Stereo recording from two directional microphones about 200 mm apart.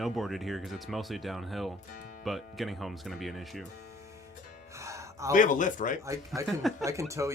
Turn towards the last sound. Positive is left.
turn(degrees=-15)  # may be behind; listen again after turning